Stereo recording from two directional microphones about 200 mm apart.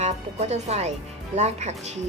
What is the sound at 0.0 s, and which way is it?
Speech, 35° right (ahead or behind).